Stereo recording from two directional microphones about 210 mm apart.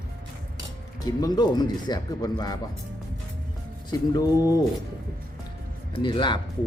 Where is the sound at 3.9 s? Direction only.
20° left (ahead or behind).